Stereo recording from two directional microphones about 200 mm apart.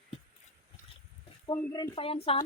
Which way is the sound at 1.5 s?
20° left (ahead or behind).